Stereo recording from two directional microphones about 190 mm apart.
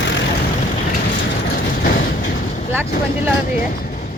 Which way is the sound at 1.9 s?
50° left (ahead or behind).